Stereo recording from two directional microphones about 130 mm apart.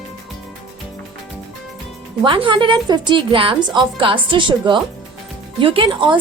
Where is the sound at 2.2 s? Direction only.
40° right (ahead or behind).